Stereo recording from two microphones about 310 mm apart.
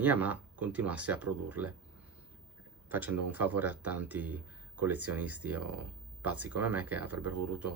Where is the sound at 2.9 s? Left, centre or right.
Centre.